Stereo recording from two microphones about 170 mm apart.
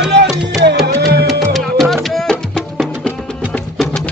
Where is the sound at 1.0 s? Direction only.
70° right (ahead or behind).